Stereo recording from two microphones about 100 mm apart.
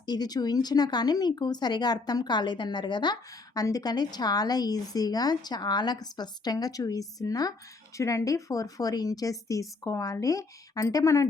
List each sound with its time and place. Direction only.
0.0 s a woman's voice: 40° left (ahead or behind)